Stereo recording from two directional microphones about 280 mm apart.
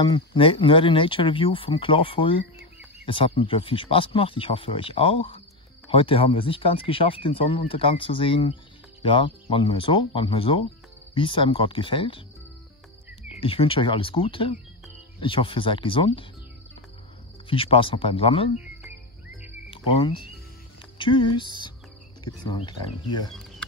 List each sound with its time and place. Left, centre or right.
0.0 s speech: centre
13.4 s speech: centre
17.5 s speech: centre
18.6 s music: centre
19.7 s speech: centre